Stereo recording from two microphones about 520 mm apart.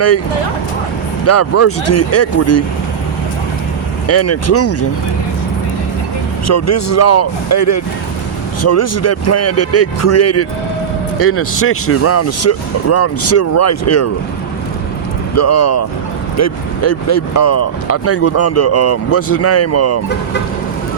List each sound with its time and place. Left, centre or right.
1.2 s speech: left
4.0 s speech: left
6.5 s speech: left
15.4 s speech: left